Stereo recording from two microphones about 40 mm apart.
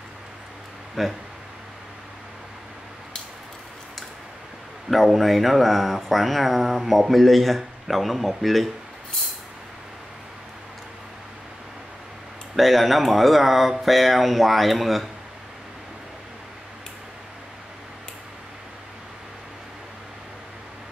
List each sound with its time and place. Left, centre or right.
1.0 s speech: centre
4.8 s speech: centre
12.5 s speech: centre